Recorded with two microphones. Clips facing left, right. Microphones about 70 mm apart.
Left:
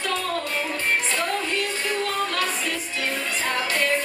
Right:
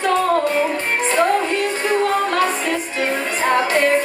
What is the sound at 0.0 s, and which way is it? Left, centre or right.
Music, right.